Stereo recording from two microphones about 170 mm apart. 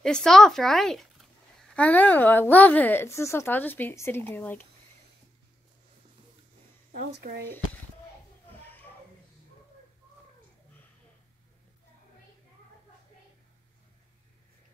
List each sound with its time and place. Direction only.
0.0 s speech: 5° left (ahead or behind)
6.9 s speech: 55° right (ahead or behind)